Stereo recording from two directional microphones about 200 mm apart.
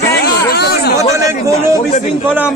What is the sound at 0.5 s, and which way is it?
Speech, 55° left (ahead or behind).